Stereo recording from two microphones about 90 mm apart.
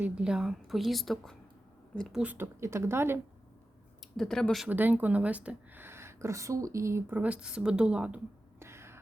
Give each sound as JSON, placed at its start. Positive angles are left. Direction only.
{"t": 0.0, "sound": "a woman's voice", "side_deg": -10}
{"t": 2.2, "sound": "speech", "side_deg": -20}
{"t": 4.2, "sound": "a woman's voice", "side_deg": 5}
{"t": 4.7, "sound": "speech", "side_deg": -20}
{"t": 5.8, "sound": "speech", "side_deg": -30}
{"t": 7.2, "sound": "a woman's voice", "side_deg": -15}
{"t": 8.5, "sound": "a sound", "side_deg": -30}